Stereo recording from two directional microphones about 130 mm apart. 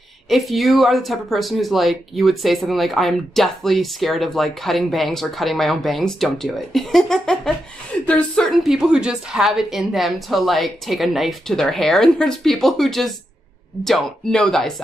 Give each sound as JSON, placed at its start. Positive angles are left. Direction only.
{"t": 0.3, "sound": "speech", "side_deg": 0}